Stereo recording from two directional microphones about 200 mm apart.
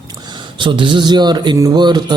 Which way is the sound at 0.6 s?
25° right (ahead or behind).